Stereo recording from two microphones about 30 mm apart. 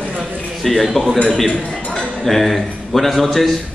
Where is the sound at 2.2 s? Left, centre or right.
Centre.